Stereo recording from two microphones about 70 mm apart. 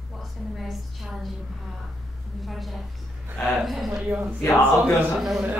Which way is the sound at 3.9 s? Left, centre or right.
Centre.